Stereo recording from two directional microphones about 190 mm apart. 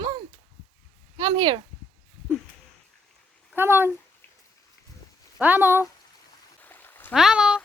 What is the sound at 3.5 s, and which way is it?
Speech, 10° right (ahead or behind).